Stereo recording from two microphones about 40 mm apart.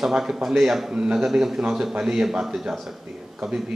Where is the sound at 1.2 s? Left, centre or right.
Centre.